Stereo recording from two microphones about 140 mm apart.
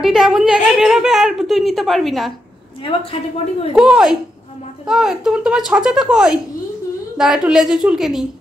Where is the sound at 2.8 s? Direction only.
40° left (ahead or behind).